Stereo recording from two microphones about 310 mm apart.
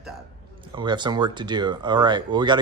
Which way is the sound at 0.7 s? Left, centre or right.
Centre.